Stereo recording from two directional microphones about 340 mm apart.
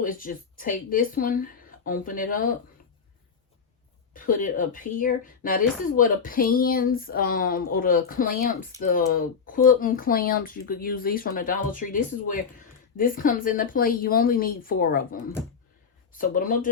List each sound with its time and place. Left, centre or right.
0.0 s speech: left
4.1 s speech: left